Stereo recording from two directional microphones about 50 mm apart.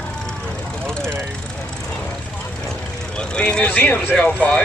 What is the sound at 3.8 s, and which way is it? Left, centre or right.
Speech, left.